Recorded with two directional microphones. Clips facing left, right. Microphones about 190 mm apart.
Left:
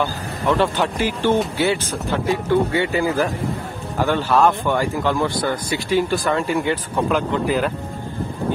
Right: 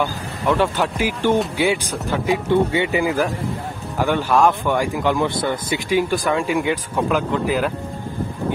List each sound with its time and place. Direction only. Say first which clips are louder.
0.0 s speech: even; 10° right (ahead or behind)